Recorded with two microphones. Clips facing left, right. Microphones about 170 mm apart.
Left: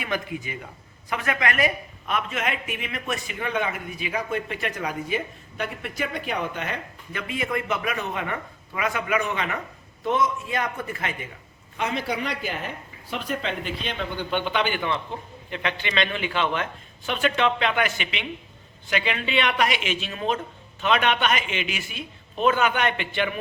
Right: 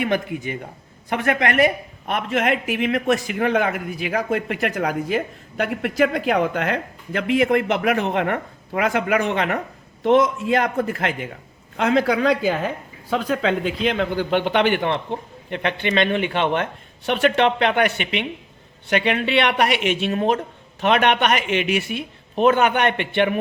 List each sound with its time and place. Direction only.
0.0 s speech: 55° right (ahead or behind); by 9.6 s 75° right (ahead or behind)
10.0 s a man's voice: 90° right
13.6 s speech: 90° right; by 15.0 s 65° right (ahead or behind)
15.4 s speech: 55° right (ahead or behind)